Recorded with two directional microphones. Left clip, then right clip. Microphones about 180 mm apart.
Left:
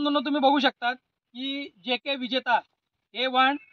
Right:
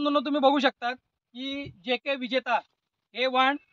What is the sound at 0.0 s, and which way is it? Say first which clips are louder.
A man's voice: even; 15° right (ahead or behind).